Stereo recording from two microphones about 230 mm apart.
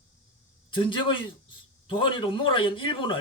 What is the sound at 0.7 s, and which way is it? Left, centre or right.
Speech, left.